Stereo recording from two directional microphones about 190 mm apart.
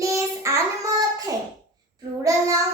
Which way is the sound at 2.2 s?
15° right (ahead or behind).